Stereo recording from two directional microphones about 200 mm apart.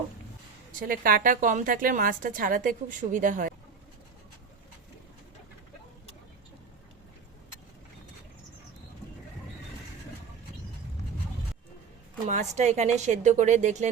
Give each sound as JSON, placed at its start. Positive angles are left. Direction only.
{"t": 0.8, "sound": "a woman's voice", "side_deg": -45}
{"t": 12.2, "sound": "speech", "side_deg": -35}